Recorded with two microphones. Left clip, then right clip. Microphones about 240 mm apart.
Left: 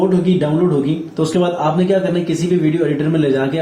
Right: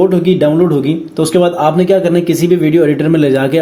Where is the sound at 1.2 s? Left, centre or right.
Right.